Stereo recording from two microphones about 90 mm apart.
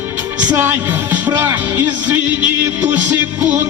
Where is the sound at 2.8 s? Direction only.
15° right (ahead or behind).